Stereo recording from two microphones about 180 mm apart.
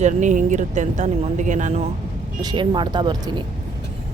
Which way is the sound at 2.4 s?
25° right (ahead or behind).